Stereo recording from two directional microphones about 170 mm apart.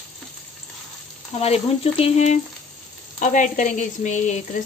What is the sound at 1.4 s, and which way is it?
A woman's voice, 35° left (ahead or behind).